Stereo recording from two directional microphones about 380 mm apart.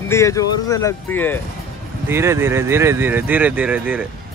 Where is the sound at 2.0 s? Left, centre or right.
Centre.